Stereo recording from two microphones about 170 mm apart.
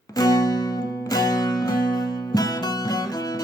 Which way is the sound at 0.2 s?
20° left (ahead or behind).